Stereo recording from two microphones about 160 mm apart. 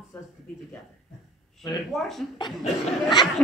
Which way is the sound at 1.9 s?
Centre (ahead or behind).